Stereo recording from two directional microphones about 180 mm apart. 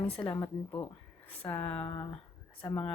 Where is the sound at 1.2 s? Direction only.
10° left (ahead or behind).